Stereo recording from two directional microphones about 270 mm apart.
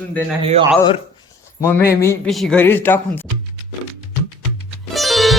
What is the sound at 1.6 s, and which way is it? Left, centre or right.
A man's voice, centre.